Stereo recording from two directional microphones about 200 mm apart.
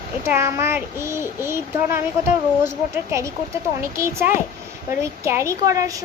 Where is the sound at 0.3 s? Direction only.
15° right (ahead or behind).